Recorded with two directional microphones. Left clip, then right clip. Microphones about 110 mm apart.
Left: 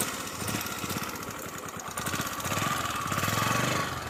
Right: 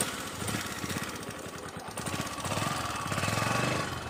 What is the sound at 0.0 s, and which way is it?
Lawn mower, 30° left (ahead or behind).